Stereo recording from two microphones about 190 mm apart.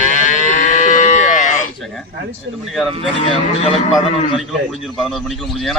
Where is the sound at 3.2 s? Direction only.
30° left (ahead or behind).